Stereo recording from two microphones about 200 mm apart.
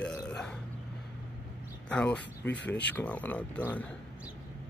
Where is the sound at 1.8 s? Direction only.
5° left (ahead or behind).